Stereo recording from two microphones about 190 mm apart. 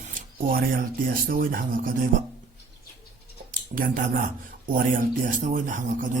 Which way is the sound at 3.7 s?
45° right (ahead or behind).